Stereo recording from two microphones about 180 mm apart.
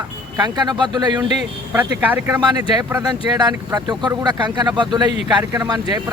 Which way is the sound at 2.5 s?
20° right (ahead or behind).